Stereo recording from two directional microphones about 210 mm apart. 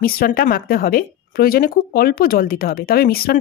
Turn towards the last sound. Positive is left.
turn(degrees=45)  # may be behind; listen again after turning